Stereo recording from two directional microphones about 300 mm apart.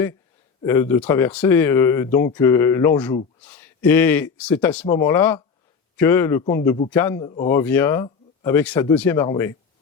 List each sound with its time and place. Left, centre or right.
0.6 s speech: centre